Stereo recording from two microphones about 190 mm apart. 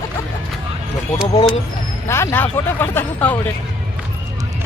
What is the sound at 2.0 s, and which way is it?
Speech, 15° left (ahead or behind).